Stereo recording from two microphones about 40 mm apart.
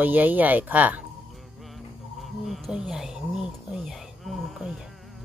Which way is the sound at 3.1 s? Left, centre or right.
Centre.